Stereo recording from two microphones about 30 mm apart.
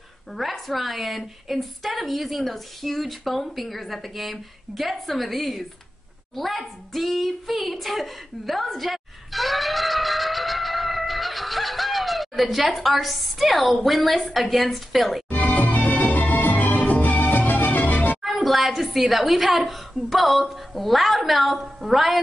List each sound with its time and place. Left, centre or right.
0.4 s a woman's voice: centre
7.1 s a sound: centre
13.7 s a woman's voice: centre
15.2 s music: left
18.2 s a woman's voice: centre